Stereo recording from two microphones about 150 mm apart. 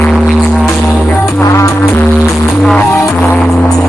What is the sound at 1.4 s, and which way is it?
Music, 20° left (ahead or behind).